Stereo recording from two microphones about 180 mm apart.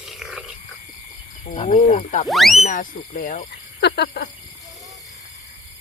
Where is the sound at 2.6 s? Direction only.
40° left (ahead or behind).